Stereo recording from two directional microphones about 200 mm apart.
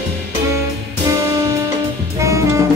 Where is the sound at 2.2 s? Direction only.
15° right (ahead or behind).